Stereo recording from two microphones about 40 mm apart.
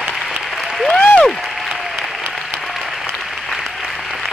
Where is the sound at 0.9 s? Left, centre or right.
Left.